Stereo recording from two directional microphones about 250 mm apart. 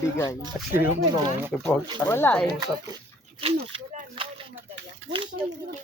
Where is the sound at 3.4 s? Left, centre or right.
Right.